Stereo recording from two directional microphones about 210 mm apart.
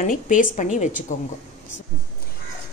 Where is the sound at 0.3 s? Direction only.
40° left (ahead or behind).